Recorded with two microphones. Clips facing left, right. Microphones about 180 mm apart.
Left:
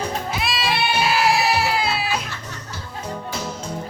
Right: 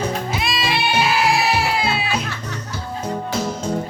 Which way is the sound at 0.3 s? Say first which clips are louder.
Right 1 dB; centre (ahead or behind).